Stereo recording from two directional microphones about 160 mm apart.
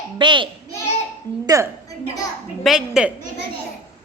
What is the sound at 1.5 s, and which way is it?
Speech, 20° right (ahead or behind).